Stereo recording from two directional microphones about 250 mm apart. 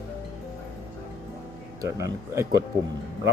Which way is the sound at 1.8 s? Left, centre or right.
Centre.